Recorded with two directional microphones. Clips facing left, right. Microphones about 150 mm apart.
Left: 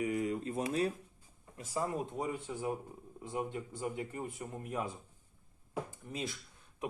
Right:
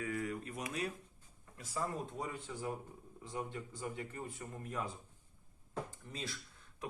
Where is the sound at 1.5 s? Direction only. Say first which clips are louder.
Left 4 dB; 15° left (ahead or behind).